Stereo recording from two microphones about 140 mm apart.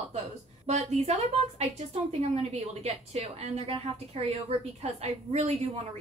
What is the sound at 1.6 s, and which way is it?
A woman's voice, 45° right (ahead or behind).